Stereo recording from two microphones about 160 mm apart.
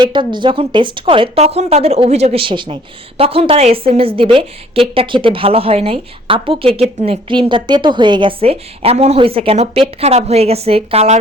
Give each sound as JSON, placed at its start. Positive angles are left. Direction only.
{"t": 0.0, "sound": "a woman's voice", "side_deg": -30}